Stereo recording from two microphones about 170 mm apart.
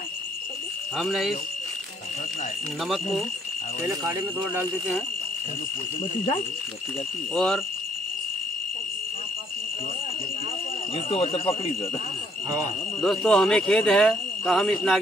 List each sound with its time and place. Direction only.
0.9 s speech: centre (ahead or behind)
3.8 s speech: centre (ahead or behind)
7.3 s speech: 5° left (ahead or behind)
11.1 s speech: 35° left (ahead or behind)
13.0 s speech: 5° left (ahead or behind)